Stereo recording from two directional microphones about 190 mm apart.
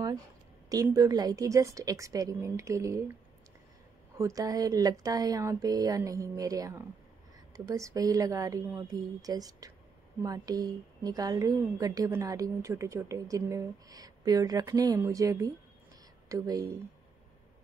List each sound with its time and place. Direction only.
0.7 s a woman's voice: 20° right (ahead or behind)
4.2 s a woman's voice: 15° right (ahead or behind)